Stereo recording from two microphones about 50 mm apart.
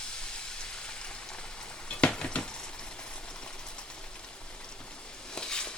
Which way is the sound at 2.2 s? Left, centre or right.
Left.